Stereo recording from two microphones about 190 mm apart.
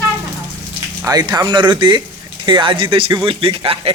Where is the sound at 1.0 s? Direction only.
20° right (ahead or behind).